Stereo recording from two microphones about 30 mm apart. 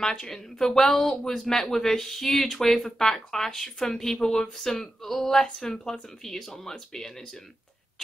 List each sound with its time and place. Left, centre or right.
0.0 s speech: centre